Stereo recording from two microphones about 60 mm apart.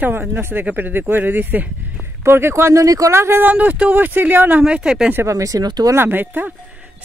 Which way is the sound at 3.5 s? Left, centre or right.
Right.